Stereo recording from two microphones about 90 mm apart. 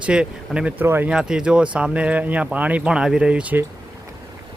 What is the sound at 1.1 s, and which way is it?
Speech, 10° right (ahead or behind).